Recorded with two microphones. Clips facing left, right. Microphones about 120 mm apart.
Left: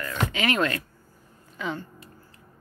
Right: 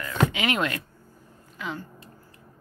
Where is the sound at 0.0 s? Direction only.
15° right (ahead or behind).